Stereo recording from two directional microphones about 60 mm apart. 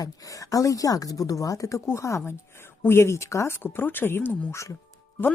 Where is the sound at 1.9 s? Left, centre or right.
Left.